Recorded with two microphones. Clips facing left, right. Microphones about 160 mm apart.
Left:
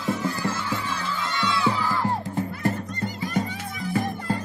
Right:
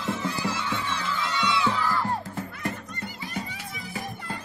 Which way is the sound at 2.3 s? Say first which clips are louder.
Left 7 dB; 35° left (ahead or behind).